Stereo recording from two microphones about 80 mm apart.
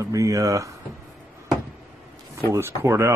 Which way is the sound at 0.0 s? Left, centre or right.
Right.